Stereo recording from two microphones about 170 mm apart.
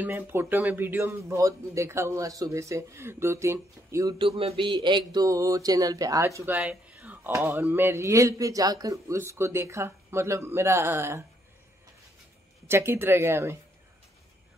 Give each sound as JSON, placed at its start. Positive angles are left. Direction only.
{"t": 0.0, "sound": "speech", "side_deg": -15}
{"t": 4.2, "sound": "speech", "side_deg": -35}
{"t": 12.6, "sound": "speech", "side_deg": -15}